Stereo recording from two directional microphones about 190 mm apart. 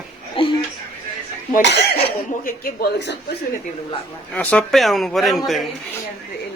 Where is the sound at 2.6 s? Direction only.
60° left (ahead or behind).